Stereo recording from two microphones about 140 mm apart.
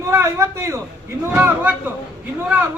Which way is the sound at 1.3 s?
15° right (ahead or behind).